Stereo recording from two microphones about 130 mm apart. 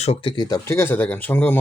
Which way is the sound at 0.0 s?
50° left (ahead or behind).